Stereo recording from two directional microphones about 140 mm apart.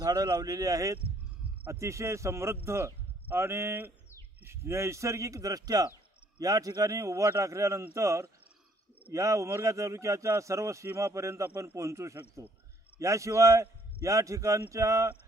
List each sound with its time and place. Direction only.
0.0 s a man's voice: 25° right (ahead or behind)